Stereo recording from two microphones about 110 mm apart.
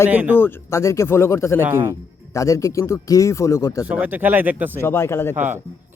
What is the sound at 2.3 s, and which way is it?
A man's voice, 30° left (ahead or behind).